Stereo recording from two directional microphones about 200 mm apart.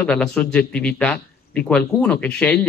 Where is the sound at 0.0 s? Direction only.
5° left (ahead or behind).